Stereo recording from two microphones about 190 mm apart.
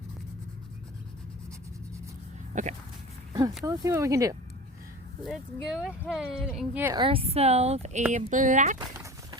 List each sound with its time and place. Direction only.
2.5 s a sound: 40° right (ahead or behind)
3.7 s speech: 15° right (ahead or behind)
5.2 s speech: centre (ahead or behind)
6.9 s speech: 25° right (ahead or behind)